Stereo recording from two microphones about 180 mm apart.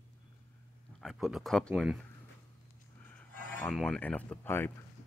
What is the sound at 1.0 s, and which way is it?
Speech, centre (ahead or behind).